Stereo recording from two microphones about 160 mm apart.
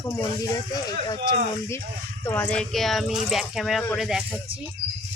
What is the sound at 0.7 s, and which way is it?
Speech, 25° left (ahead or behind).